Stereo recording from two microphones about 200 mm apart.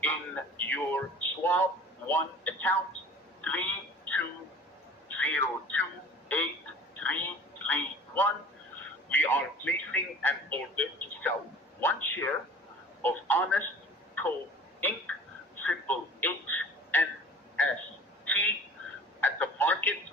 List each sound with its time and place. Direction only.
0.0 s a man's voice: 10° left (ahead or behind)
5.1 s speech: 10° left (ahead or behind)
6.9 s telephone: 10° left (ahead or behind)
7.7 s a man's voice: 10° left (ahead or behind)
14.8 s a man's voice: 10° left (ahead or behind)
18.3 s a sound: 10° left (ahead or behind)
19.2 s telephone: 10° left (ahead or behind)